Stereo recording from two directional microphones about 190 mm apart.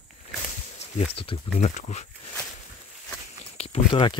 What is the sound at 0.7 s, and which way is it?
Speech, 30° left (ahead or behind).